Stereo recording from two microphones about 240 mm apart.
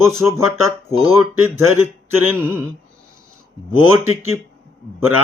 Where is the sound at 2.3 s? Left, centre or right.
Centre.